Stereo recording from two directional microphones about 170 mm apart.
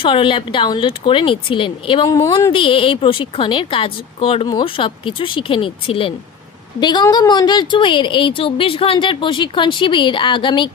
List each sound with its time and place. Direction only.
0.0 s speech: 30° left (ahead or behind)
2.0 s a woman's voice: 20° left (ahead or behind)
2.5 s a woman's voice: 30° left (ahead or behind)